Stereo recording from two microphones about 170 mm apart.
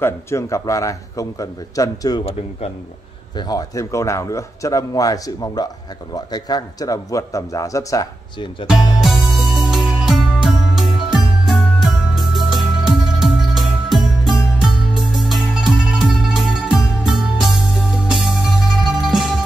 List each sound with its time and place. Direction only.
0.0 s a man's voice: 15° left (ahead or behind)
9.0 s music: centre (ahead or behind)